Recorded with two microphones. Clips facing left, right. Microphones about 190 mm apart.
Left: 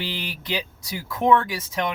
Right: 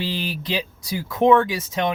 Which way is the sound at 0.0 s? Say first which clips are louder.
Right 5 dB; 25° right (ahead or behind).